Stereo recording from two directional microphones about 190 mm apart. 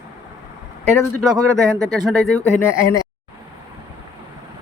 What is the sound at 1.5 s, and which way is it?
Speech, 15° right (ahead or behind).